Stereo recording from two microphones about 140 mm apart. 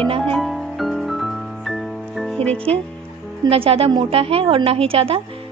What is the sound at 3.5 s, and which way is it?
Speech, 45° right (ahead or behind).